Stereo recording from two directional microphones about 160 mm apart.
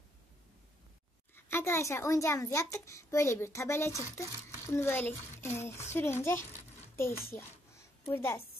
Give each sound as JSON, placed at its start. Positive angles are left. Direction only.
{"t": 1.3, "sound": "a child's voice", "side_deg": 15}